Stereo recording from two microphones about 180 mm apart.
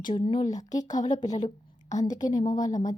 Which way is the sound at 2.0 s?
20° left (ahead or behind).